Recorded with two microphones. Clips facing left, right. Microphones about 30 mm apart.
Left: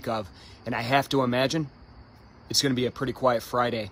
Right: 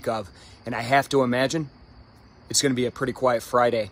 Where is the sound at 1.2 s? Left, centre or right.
Centre.